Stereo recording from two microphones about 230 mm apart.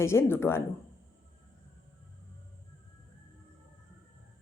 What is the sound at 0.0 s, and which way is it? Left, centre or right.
Speech, centre.